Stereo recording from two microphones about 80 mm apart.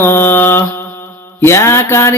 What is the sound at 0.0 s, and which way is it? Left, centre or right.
Mantra, left.